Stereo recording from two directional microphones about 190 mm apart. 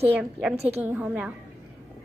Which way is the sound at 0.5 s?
35° right (ahead or behind).